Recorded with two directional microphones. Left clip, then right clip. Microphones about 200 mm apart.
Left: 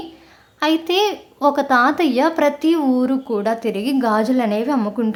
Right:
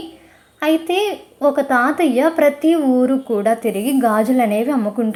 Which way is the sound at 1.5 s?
Centre (ahead or behind).